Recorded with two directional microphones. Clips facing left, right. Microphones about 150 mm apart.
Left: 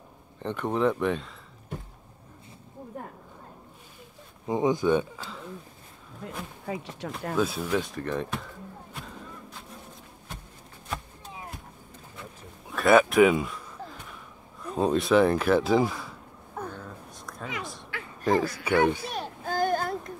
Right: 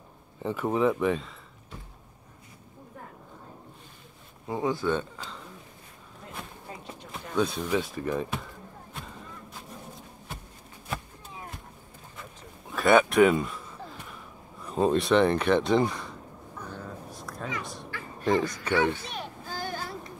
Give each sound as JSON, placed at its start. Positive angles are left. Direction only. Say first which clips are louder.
{"t": 0.4, "sound": "speech", "louder": "right 1 dB", "side_deg": -5}
{"t": 1.7, "sound": "a sound", "louder": "left 7 dB", "side_deg": 50}
{"t": 4.5, "sound": "speech", "louder": "left 4 dB", "side_deg": 20}
{"t": 6.6, "sound": "speech", "louder": "left 9 dB", "side_deg": 90}
{"t": 7.3, "sound": "speech", "louder": "right 1 dB", "side_deg": 5}
{"t": 8.9, "sound": "a sound", "louder": "right 1 dB", "side_deg": 0}
{"t": 12.6, "sound": "speech", "louder": "left 1 dB", "side_deg": 0}
{"t": 14.6, "sound": "speech", "louder": "right 1 dB", "side_deg": 0}
{"t": 16.6, "sound": "vehicle", "louder": "left 7 dB", "side_deg": 60}
{"t": 17.1, "sound": "a sound", "louder": "right 2 dB", "side_deg": 0}
{"t": 18.2, "sound": "speech", "louder": "left 1 dB", "side_deg": 0}
{"t": 19.1, "sound": "a sound", "louder": "left 7 dB", "side_deg": 50}